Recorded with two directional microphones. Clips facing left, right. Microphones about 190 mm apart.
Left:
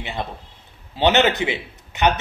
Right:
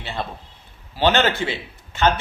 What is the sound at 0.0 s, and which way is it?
Speech, 15° left (ahead or behind).